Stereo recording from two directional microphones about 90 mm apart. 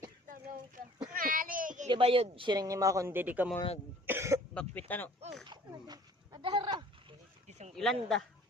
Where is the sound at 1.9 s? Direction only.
90° right.